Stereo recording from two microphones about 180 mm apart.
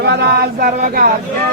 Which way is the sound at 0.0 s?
65° right (ahead or behind).